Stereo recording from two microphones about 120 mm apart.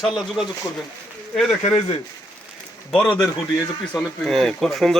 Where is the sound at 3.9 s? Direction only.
5° left (ahead or behind).